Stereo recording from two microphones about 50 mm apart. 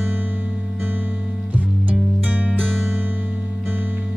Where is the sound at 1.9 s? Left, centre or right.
Right.